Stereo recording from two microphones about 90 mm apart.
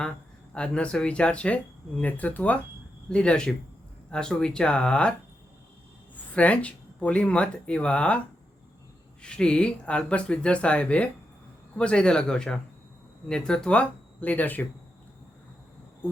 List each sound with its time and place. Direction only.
0.5 s speech: 10° left (ahead or behind)
6.3 s speech: 15° left (ahead or behind)
9.2 s speech: 10° left (ahead or behind)